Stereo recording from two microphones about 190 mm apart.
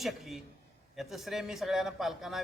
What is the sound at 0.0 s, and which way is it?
A man's voice, centre (ahead or behind).